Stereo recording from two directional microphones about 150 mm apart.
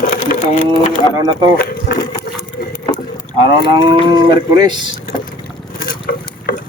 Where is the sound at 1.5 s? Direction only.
90° left.